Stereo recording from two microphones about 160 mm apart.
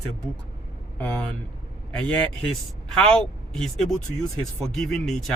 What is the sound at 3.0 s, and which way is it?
Speech, 5° left (ahead or behind).